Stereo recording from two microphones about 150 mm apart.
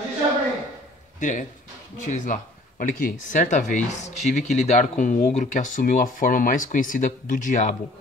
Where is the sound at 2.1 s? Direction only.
55° left (ahead or behind).